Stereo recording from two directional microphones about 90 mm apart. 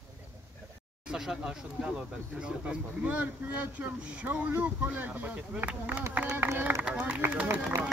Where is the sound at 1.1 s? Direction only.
5° right (ahead or behind).